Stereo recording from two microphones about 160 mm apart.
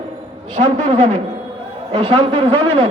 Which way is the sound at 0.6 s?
55° right (ahead or behind).